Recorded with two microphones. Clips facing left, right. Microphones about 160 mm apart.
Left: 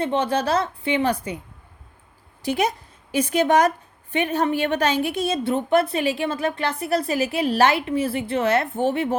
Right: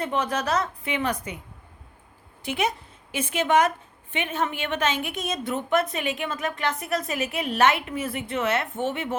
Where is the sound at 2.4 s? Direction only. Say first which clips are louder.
Left 4 dB; 35° left (ahead or behind).